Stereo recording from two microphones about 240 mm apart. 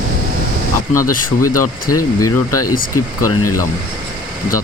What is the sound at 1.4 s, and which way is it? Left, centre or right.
Speech, left.